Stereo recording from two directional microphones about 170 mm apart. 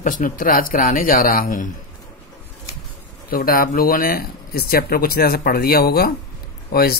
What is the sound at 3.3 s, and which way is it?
Speech, 60° left (ahead or behind).